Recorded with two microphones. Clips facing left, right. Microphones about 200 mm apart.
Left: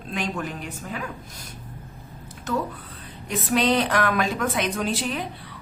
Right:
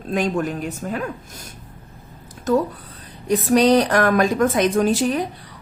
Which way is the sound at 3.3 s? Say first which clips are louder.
Right 7 dB; 40° right (ahead or behind).